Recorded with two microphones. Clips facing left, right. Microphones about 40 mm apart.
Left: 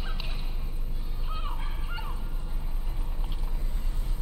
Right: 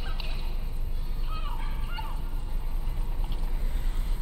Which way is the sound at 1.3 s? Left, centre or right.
Centre.